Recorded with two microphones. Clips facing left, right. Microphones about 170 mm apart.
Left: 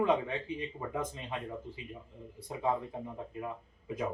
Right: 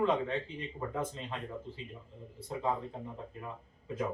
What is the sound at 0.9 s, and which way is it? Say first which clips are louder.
Speech: right 1 dB; 10° left (ahead or behind).